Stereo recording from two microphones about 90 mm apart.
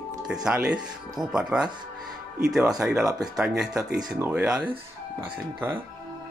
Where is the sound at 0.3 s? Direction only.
10° right (ahead or behind).